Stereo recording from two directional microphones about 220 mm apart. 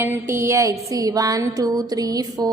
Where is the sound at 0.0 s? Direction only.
10° right (ahead or behind).